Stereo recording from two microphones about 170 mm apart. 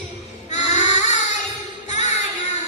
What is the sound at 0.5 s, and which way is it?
Baby cry, 45° left (ahead or behind).